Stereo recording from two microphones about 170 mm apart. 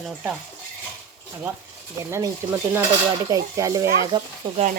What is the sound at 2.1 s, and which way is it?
Speech, 15° right (ahead or behind).